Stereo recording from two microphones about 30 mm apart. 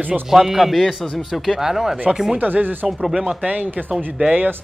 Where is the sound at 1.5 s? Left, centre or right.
Centre.